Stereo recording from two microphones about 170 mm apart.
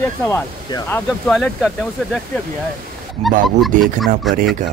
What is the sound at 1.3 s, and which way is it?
Speech, centre (ahead or behind).